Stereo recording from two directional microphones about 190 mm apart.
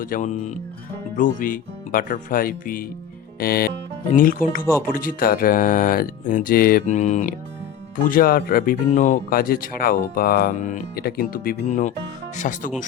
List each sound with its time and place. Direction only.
0.0 s speech: 45° left (ahead or behind)